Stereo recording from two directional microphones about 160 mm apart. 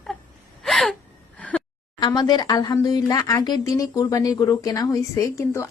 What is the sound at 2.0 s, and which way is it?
Speech, 25° left (ahead or behind).